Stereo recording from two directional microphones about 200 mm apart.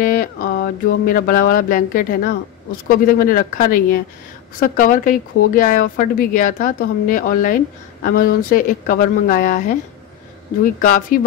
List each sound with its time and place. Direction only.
0.0 s mantra: 45° left (ahead or behind)
10.6 s mantra: 40° left (ahead or behind)